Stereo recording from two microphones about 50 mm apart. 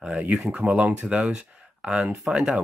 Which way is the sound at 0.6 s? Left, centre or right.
Right.